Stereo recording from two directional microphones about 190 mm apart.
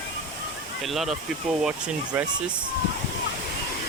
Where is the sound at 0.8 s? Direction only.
Centre (ahead or behind).